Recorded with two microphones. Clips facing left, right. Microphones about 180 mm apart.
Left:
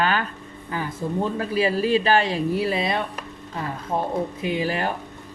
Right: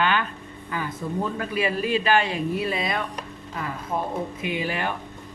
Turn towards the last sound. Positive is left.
turn(degrees=40)  # may be behind; listen again after turning